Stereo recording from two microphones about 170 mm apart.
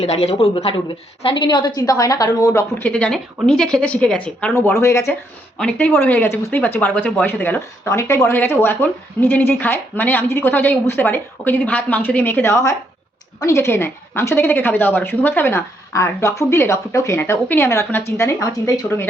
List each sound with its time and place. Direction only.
0.0 s speech: 40° left (ahead or behind); by 19.0 s 15° left (ahead or behind)